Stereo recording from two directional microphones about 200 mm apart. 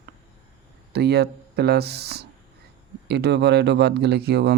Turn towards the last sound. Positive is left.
turn(degrees=-55)  # may be behind; listen again after turning